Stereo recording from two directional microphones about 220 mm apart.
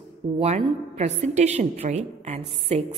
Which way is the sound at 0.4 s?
30° right (ahead or behind).